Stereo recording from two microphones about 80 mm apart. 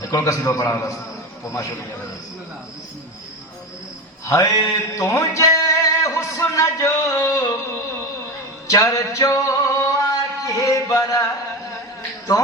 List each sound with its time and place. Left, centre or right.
0.0 s a man's voice: left
4.3 s mantra: left
4.9 s a sound: left